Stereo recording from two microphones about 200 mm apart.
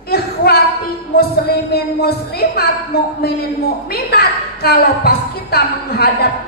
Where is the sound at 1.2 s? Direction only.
50° left (ahead or behind).